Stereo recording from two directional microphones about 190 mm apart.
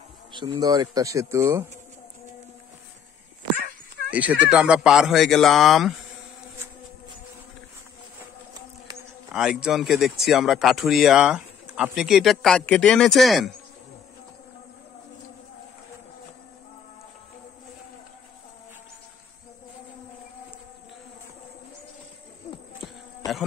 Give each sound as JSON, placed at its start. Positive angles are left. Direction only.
{"t": 0.3, "sound": "speech", "side_deg": -25}
{"t": 4.1, "sound": "speech", "side_deg": -5}
{"t": 9.3, "sound": "speech", "side_deg": -5}
{"t": 22.5, "sound": "insect", "side_deg": 40}